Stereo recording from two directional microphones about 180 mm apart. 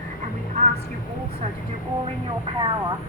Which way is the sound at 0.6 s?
40° right (ahead or behind).